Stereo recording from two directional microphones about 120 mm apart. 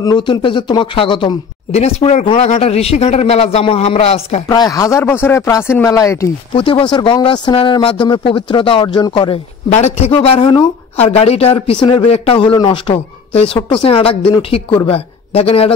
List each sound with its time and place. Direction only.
0.0 s speech: 40° left (ahead or behind)
1.7 s speech: 65° left (ahead or behind)
4.5 s speech: 30° left (ahead or behind)
6.5 s speech: 45° left (ahead or behind)
9.7 s speech: 65° left (ahead or behind); by 13.0 s 40° left (ahead or behind)
13.3 s a woman's voice: 60° left (ahead or behind)